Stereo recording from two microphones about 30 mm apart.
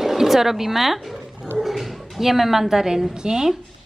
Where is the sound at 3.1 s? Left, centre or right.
Centre.